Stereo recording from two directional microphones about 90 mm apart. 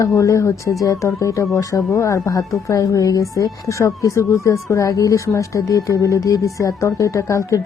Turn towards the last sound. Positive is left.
turn(degrees=35)  # may be behind; listen again after turning